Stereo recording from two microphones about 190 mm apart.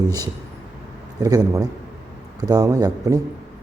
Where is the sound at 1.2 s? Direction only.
20° right (ahead or behind).